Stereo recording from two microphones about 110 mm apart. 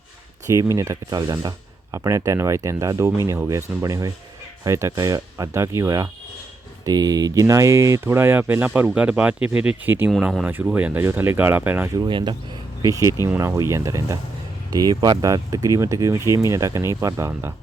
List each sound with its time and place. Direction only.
0.4 s speech: 30° right (ahead or behind)
11.9 s speech: 45° right (ahead or behind)
12.8 s speech: 30° right (ahead or behind)